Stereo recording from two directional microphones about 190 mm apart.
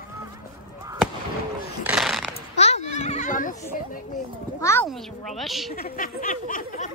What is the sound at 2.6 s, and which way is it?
Goat, 35° left (ahead or behind).